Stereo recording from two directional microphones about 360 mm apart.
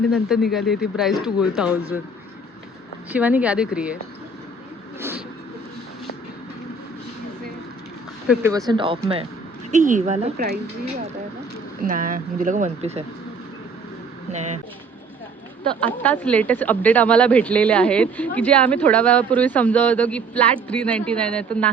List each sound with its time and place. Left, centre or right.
0.1 s speech: centre
3.1 s speech: centre
8.3 s speech: centre; by 10.6 s right
11.8 s speech: right
14.3 s speech: centre
16.0 s speech: centre